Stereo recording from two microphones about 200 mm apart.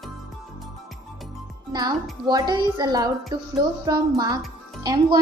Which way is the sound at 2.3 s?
20° right (ahead or behind).